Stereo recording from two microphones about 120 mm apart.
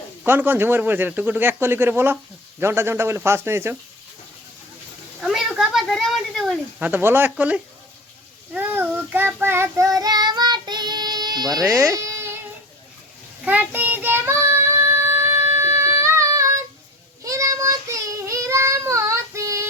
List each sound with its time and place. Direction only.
0.3 s speech: 15° right (ahead or behind)
5.2 s a sound: centre (ahead or behind)
6.7 s speech: 15° right (ahead or behind)
8.5 s child singing: 15° right (ahead or behind)
10.0 s child singing: 35° right (ahead or behind)
11.6 s speech: 15° right (ahead or behind)
11.9 s a sound: 25° right (ahead or behind)
13.4 s child singing: 15° right (ahead or behind)